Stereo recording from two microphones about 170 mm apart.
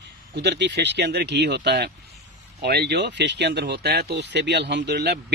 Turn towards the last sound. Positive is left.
turn(degrees=-80)